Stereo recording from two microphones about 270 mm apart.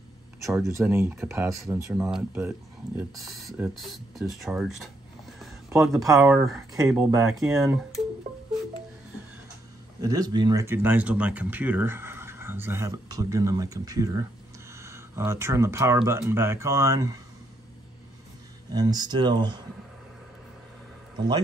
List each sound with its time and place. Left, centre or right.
0.7 s speech: centre
10.0 s speech: centre
18.7 s speech: centre